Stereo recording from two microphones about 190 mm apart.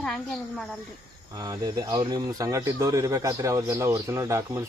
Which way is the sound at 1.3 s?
20° right (ahead or behind).